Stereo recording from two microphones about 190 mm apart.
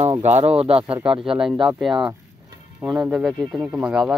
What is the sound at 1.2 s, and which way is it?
Speech, centre (ahead or behind).